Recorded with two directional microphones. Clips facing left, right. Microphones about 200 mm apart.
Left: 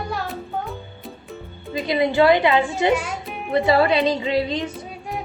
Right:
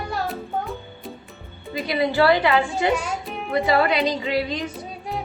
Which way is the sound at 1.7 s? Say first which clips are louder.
Left 2 dB; 20° left (ahead or behind).